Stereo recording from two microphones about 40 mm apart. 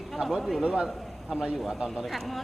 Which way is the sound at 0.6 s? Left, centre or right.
Centre.